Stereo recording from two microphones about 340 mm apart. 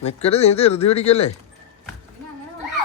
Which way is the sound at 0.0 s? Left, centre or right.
Centre.